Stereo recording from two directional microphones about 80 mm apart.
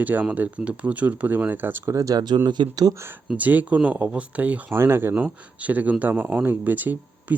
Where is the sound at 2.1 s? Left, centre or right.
Right.